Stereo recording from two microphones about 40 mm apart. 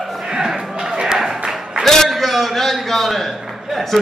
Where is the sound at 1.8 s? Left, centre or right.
Centre.